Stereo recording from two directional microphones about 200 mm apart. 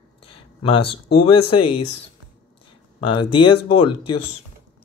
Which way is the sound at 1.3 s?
25° left (ahead or behind).